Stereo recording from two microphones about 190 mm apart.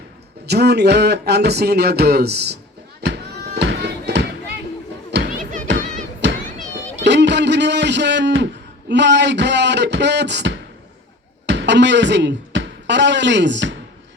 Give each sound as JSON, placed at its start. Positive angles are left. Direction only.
{"t": 0.4, "sound": "speech", "side_deg": -60}
{"t": 3.0, "sound": "music", "side_deg": -65}
{"t": 6.2, "sound": "children playing", "side_deg": -65}
{"t": 7.0, "sound": "a sound", "side_deg": -65}
{"t": 8.9, "sound": "speech", "side_deg": -65}